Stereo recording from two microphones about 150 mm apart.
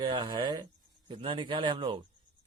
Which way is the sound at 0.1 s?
30° right (ahead or behind).